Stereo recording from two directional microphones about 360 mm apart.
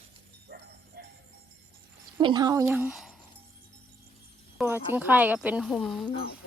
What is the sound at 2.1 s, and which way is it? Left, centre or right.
Speech, centre.